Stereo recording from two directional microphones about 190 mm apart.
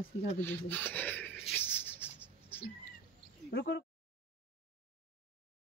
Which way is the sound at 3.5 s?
60° left (ahead or behind).